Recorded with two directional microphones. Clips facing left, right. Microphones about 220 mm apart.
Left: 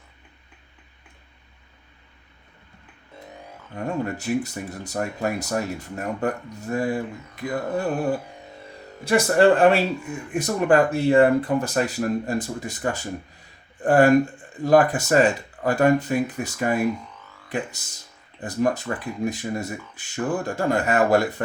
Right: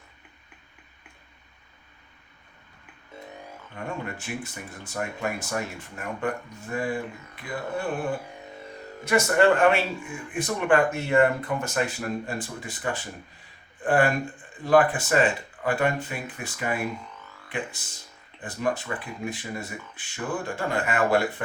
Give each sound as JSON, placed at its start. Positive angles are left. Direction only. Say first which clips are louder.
{"t": 4.0, "sound": "speech", "louder": "left 9 dB", "side_deg": 40}
{"t": 9.0, "sound": "speech", "louder": "left 3 dB", "side_deg": 35}